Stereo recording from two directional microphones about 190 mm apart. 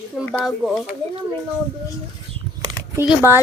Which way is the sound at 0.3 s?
5° left (ahead or behind).